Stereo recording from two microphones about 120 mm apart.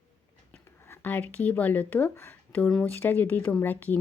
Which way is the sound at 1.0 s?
15° left (ahead or behind).